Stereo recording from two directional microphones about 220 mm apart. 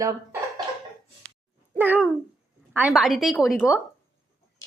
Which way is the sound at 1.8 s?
5° right (ahead or behind).